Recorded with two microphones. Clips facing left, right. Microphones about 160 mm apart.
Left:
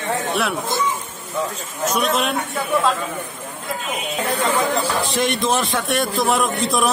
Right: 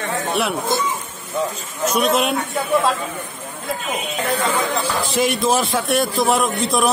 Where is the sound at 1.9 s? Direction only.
Centre (ahead or behind).